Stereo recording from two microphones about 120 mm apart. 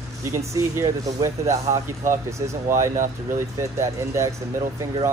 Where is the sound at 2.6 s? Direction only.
25° right (ahead or behind).